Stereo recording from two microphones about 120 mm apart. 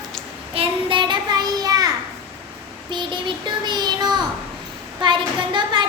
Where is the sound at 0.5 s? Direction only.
45° right (ahead or behind).